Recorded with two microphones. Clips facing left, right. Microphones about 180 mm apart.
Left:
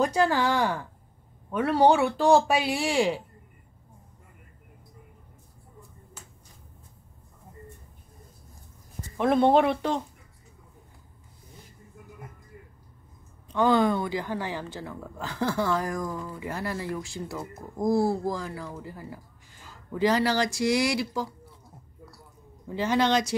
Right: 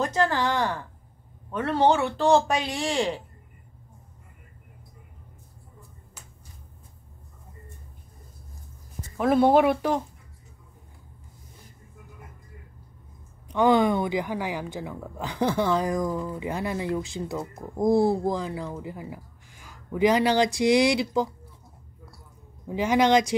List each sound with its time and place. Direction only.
0.0 s speech: 10° left (ahead or behind)
9.1 s speech: 5° right (ahead or behind)
13.5 s speech: 15° right (ahead or behind)
22.7 s speech: 15° right (ahead or behind)